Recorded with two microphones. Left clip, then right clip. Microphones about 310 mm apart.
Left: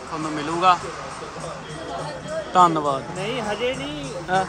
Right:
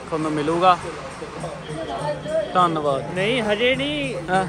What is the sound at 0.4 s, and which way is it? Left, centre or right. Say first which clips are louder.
Speech: right 1 dB; centre.